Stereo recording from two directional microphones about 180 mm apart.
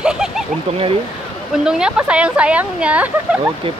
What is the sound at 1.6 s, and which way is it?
Speech, 5° right (ahead or behind).